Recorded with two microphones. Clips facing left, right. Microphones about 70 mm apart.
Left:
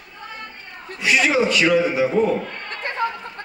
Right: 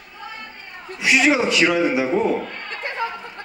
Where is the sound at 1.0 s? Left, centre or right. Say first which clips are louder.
Right 1 dB; centre.